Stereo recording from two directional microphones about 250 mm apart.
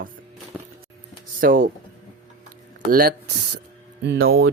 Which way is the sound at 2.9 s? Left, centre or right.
Right.